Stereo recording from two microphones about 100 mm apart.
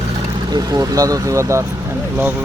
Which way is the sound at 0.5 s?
40° right (ahead or behind).